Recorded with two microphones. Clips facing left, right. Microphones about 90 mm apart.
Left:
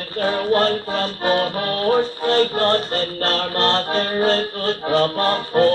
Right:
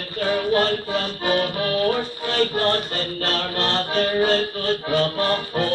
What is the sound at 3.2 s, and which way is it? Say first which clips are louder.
Music: left 4 dB; 35° left (ahead or behind).